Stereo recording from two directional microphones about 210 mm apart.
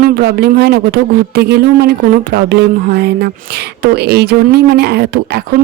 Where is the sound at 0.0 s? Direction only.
45° right (ahead or behind).